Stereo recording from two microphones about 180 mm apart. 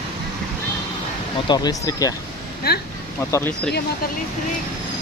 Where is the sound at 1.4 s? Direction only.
20° left (ahead or behind).